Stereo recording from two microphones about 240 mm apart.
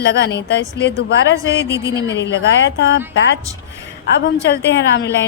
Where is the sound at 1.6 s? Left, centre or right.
Centre.